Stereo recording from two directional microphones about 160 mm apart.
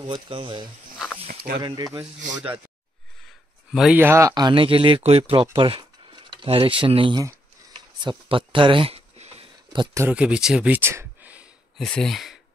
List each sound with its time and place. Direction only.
0.0 s speech: 30° right (ahead or behind)
1.2 s snake: 65° right (ahead or behind)
3.7 s speech: centre (ahead or behind)
4.0 s speech: 15° right (ahead or behind); by 7.2 s 30° right (ahead or behind)
8.0 s a sound: 30° right (ahead or behind)
9.9 s speech: 10° right (ahead or behind)
11.8 s speech: 5° left (ahead or behind)